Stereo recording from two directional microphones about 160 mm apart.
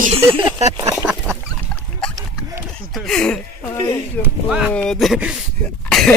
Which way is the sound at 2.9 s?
Centre (ahead or behind).